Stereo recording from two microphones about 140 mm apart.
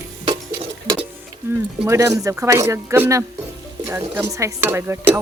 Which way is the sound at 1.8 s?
20° right (ahead or behind).